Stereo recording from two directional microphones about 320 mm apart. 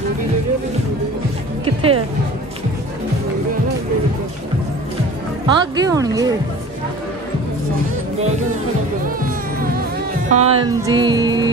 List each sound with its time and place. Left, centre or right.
1.6 s music: centre
5.5 s speech: centre
10.3 s music: centre